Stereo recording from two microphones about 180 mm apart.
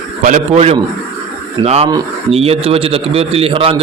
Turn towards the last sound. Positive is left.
turn(degrees=-30)  # may be behind; listen again after turning